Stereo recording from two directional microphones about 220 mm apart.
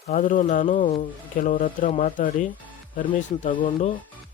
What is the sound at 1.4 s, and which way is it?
Speech, 40° left (ahead or behind).